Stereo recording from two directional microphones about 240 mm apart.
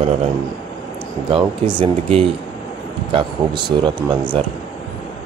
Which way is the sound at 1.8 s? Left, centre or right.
Right.